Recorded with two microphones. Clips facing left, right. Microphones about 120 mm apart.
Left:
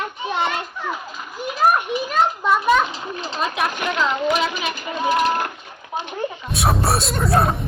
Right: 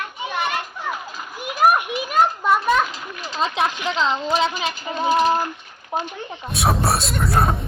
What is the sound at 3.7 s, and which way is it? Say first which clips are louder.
Speech: left 1 dB; 55° left (ahead or behind).